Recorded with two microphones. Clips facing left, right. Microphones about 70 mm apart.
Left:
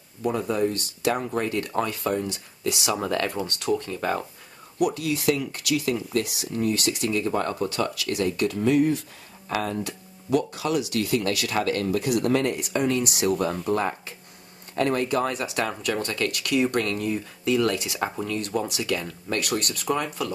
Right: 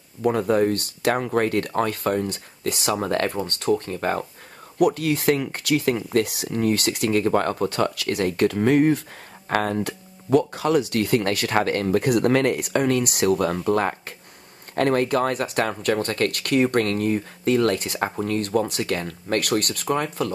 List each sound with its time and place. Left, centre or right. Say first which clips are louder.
0.2 s speech: right 5 dB; right